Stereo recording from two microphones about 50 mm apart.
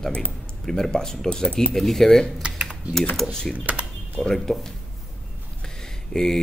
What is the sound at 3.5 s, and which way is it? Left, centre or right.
Speech, right.